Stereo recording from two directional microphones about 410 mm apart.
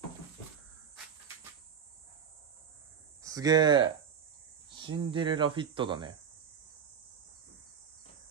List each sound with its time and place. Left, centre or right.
3.2 s speech: centre